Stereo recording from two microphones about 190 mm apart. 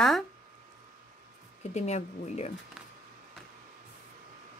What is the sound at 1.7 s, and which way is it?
Speech, 35° left (ahead or behind).